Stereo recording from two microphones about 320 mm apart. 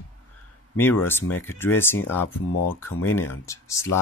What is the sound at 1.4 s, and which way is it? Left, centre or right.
Speech, centre.